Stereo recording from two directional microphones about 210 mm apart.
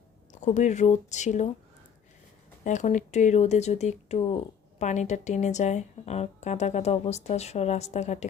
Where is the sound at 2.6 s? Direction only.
35° left (ahead or behind).